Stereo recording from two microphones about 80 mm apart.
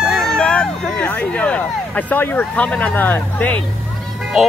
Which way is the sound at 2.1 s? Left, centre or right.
Left.